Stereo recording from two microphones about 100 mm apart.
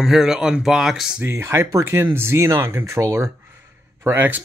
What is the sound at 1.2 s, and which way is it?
Speech, 25° right (ahead or behind).